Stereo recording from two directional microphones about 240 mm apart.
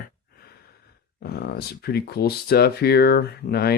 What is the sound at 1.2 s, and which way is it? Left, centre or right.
Speech, left.